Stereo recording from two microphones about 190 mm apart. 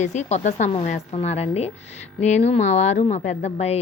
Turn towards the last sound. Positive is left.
turn(degrees=35)  # may be behind; listen again after turning